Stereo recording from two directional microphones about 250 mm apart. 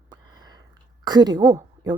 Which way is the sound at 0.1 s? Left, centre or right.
Centre.